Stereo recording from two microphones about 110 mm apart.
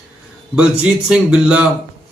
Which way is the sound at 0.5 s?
10° right (ahead or behind).